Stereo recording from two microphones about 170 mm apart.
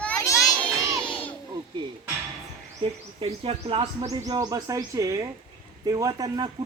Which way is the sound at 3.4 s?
35° right (ahead or behind).